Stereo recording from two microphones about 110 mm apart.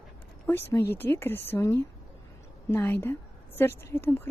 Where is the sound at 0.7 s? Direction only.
20° left (ahead or behind).